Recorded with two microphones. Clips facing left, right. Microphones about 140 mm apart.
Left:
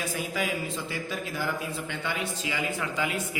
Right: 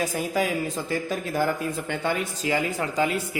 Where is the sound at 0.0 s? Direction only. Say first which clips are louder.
Right 6 dB; 40° right (ahead or behind).